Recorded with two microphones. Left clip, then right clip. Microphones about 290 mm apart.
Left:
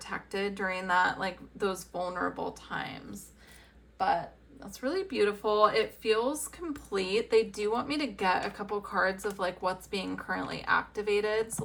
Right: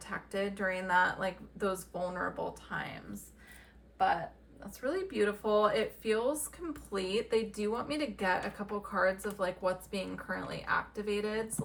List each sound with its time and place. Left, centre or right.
0.0 s speech: centre
3.9 s speech: centre
6.9 s speech: centre